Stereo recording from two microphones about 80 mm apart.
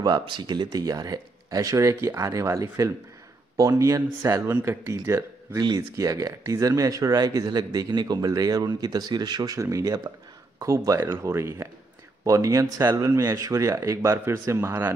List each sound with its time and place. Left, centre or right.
0.0 s speech: right
4.5 s speech: right